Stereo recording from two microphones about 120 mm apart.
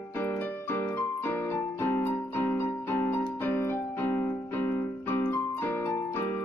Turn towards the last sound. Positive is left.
turn(degrees=20)  # may be behind; listen again after turning